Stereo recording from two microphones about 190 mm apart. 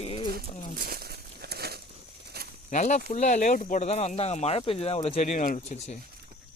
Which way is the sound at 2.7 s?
40° left (ahead or behind).